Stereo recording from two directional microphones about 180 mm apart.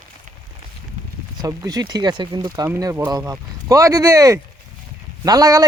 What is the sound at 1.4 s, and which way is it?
Speech, 20° right (ahead or behind).